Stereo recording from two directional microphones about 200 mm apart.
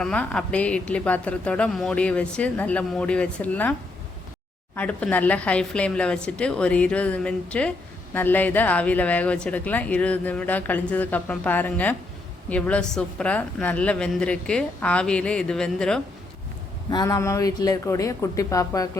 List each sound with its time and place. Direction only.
0.0 s a woman's voice: 5° left (ahead or behind)
16.9 s speech: 15° left (ahead or behind)